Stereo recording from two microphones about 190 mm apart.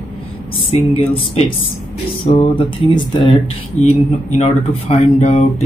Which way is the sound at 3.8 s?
35° left (ahead or behind).